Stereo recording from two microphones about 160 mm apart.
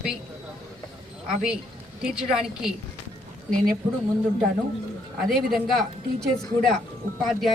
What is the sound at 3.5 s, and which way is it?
Speech, 60° right (ahead or behind).